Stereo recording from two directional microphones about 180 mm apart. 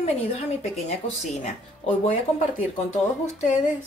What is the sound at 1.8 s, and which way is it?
Speech, 35° left (ahead or behind).